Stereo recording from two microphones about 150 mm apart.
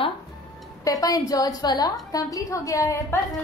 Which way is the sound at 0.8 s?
25° left (ahead or behind).